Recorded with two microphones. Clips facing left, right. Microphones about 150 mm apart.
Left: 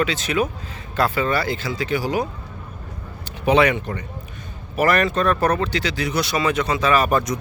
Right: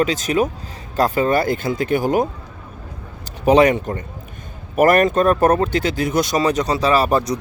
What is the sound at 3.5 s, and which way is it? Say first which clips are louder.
Speech: right 4 dB; 40° right (ahead or behind).